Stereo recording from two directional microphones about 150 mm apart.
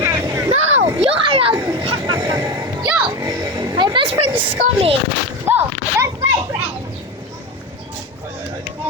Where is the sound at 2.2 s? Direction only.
20° right (ahead or behind).